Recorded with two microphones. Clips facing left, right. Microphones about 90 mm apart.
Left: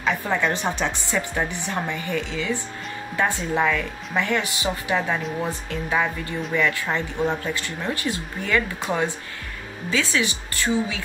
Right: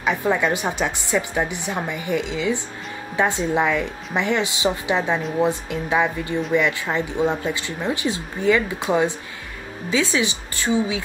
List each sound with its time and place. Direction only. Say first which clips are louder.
0.0 s a woman's voice: right 3 dB; 15° right (ahead or behind)